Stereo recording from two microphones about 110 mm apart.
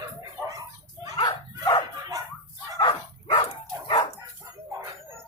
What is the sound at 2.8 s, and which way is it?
Bow-wow, 50° left (ahead or behind).